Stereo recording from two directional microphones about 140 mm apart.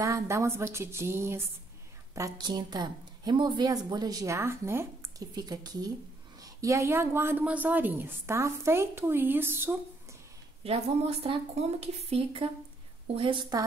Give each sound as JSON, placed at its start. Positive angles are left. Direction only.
{"t": 0.0, "sound": "a woman's voice", "side_deg": -20}
{"t": 5.3, "sound": "a woman's voice", "side_deg": -30}
{"t": 10.6, "sound": "a woman's voice", "side_deg": -45}